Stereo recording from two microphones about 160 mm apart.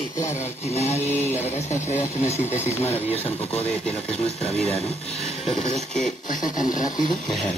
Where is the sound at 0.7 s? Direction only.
40° left (ahead or behind).